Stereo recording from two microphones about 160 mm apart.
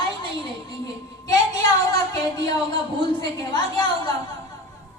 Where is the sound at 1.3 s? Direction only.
20° left (ahead or behind).